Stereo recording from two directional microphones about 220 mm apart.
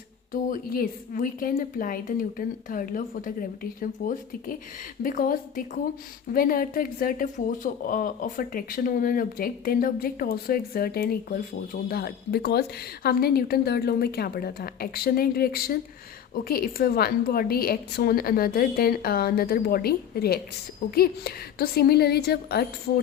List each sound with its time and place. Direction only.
0.5 s a woman's voice: 40° left (ahead or behind)